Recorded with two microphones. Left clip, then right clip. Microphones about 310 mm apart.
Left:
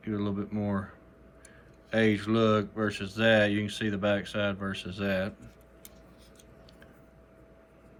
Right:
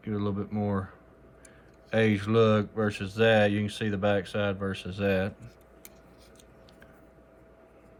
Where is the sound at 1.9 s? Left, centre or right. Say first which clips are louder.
Right 2 dB; right.